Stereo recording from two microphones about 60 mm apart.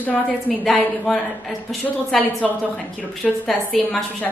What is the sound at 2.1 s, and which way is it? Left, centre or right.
A woman's voice, centre.